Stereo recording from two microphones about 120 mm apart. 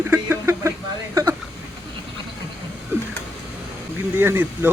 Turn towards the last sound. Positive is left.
turn(degrees=-20)  # may be behind; listen again after turning